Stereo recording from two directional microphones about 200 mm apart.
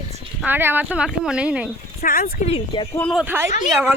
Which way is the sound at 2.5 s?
25° left (ahead or behind).